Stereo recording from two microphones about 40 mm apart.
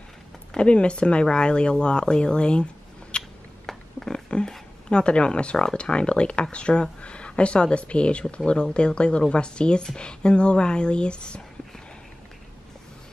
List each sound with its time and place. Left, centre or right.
0.6 s speech: left
3.6 s a sound: centre
4.3 s speech: left